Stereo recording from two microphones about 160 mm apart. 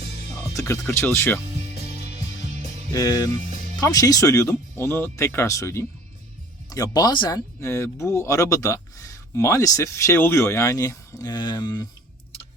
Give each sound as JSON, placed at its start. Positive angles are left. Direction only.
{"t": 0.3, "sound": "speech", "side_deg": 15}
{"t": 2.9, "sound": "speech", "side_deg": 20}